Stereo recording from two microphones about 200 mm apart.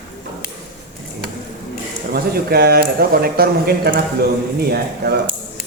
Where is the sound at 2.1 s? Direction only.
55° right (ahead or behind).